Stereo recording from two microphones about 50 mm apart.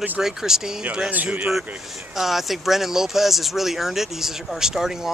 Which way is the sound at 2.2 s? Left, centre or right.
Centre.